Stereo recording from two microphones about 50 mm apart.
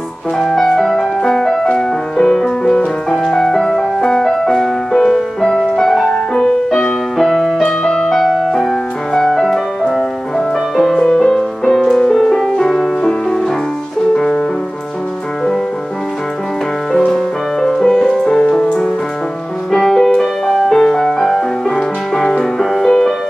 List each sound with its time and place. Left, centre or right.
0.4 s music: centre
7.6 s music: centre
8.1 s music: centre
11.0 s music: centre
14.1 s music: centre
16.9 s music: centre